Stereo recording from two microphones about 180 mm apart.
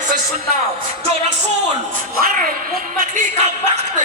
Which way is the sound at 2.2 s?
50° right (ahead or behind).